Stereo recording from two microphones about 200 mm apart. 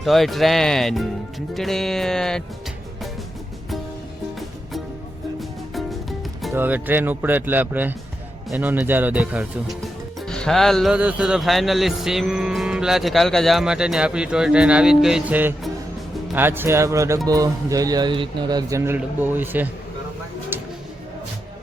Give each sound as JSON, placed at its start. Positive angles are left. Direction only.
{"t": 0.0, "sound": "speech", "side_deg": 0}
{"t": 5.4, "sound": "music", "side_deg": 0}
{"t": 6.5, "sound": "speech", "side_deg": -10}
{"t": 20.5, "sound": "a sound", "side_deg": -10}